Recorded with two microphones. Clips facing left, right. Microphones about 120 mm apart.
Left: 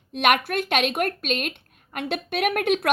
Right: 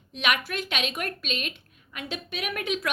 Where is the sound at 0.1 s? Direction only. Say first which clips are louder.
Left 7 dB; 55° left (ahead or behind).